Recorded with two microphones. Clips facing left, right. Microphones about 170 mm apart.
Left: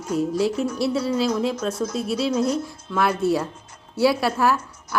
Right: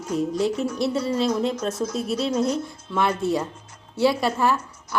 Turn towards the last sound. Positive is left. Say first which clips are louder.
# left 1 dB
turn(degrees=5)  # may be behind; listen again after turning